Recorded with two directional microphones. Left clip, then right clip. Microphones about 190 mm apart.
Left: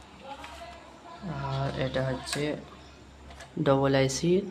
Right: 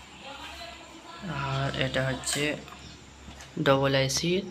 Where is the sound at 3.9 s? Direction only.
35° left (ahead or behind).